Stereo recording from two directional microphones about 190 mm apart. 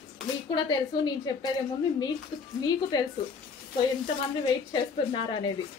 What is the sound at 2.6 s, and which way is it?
Speech, 20° left (ahead or behind).